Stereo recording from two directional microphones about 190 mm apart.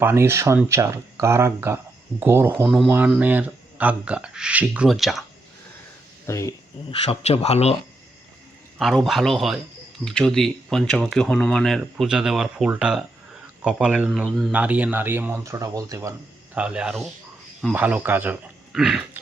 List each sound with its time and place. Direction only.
0.0 s speech: 15° right (ahead or behind)
2.6 s speech: centre (ahead or behind)
6.2 s speech: 15° left (ahead or behind)
6.9 s speech: 30° left (ahead or behind)
8.8 s speech: centre (ahead or behind); by 16.1 s 15° right (ahead or behind)
16.6 s speech: 5° right (ahead or behind)